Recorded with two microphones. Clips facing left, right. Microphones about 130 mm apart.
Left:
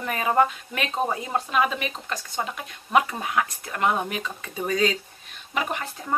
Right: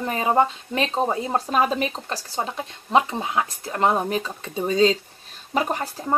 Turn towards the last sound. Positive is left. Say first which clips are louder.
# right 5 dB
turn(degrees=-35)  # may be behind; listen again after turning